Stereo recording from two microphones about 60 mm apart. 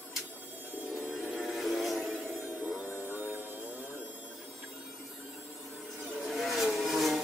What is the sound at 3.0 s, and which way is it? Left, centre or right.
Music, right.